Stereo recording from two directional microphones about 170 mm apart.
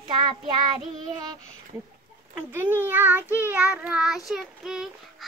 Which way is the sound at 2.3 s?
10° right (ahead or behind).